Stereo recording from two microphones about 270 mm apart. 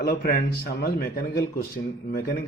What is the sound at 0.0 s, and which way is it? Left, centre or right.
Speech, left.